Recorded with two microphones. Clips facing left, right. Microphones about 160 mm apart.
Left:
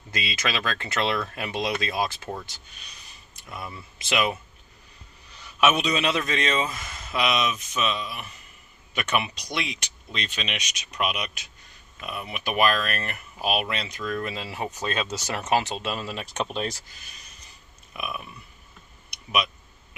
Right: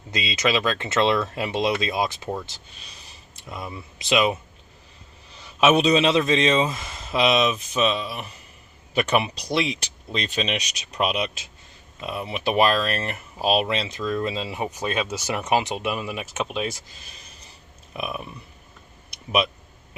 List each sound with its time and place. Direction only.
0.1 s speech: 20° right (ahead or behind)
5.5 s speech: 30° right (ahead or behind)
16.2 s speech: 5° right (ahead or behind)
17.9 s speech: 30° right (ahead or behind)